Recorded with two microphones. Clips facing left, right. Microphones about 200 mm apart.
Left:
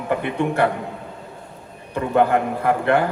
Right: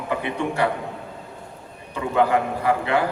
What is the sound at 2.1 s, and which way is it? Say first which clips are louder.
Speech: left 2 dB; 55° left (ahead or behind).